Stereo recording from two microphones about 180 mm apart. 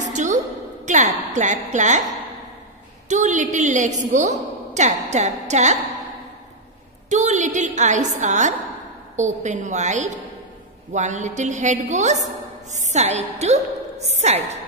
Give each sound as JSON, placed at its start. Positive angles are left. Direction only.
{"t": 0.0, "sound": "a sound", "side_deg": -40}
{"t": 0.8, "sound": "a woman's voice", "side_deg": -40}
{"t": 3.1, "sound": "a woman's voice", "side_deg": -40}
{"t": 7.1, "sound": "a woman's voice", "side_deg": -40}